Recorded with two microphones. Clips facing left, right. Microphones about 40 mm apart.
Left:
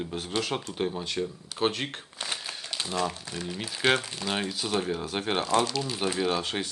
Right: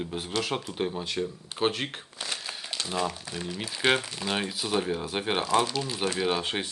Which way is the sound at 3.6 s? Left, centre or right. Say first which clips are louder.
Even; centre.